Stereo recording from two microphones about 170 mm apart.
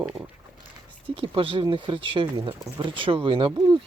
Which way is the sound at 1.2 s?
30° right (ahead or behind).